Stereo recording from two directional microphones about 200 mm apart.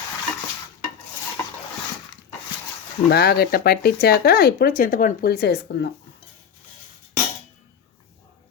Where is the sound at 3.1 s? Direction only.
50° left (ahead or behind).